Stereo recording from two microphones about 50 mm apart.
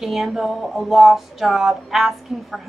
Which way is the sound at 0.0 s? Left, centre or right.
Centre.